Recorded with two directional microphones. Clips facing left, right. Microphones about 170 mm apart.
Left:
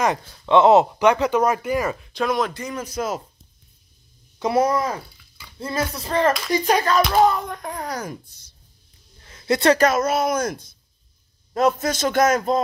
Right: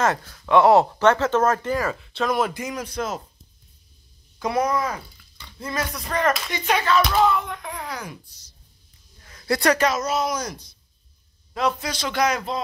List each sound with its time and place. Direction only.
0.0 s speech: 20° left (ahead or behind)
2.2 s speech: 5° right (ahead or behind)
2.8 s speech: 5° left (ahead or behind)
4.4 s speech: 30° left (ahead or behind); by 8.5 s 50° left (ahead or behind)
9.2 s a sound: 25° left (ahead or behind)
9.8 s a man's voice: 55° left (ahead or behind)